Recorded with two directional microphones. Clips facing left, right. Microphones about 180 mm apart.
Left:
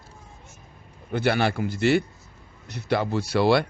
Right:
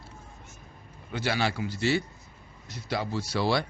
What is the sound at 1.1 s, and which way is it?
A man's voice, 55° left (ahead or behind).